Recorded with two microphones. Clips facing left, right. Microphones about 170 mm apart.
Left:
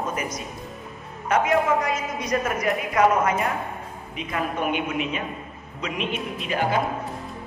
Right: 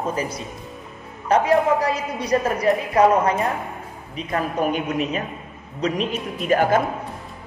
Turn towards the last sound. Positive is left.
turn(degrees=-45)  # may be behind; listen again after turning